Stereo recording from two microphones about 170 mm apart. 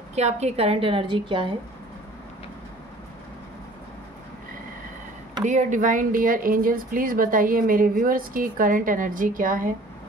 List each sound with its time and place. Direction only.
0.1 s a woman's voice: 40° right (ahead or behind)
5.4 s speech: 45° right (ahead or behind)